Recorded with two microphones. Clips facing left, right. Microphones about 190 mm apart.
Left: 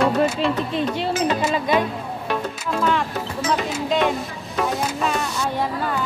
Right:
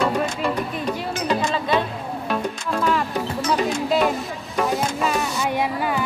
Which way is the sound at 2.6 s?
Centre (ahead or behind).